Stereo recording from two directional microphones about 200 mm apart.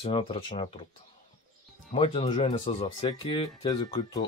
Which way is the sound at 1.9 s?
30° left (ahead or behind).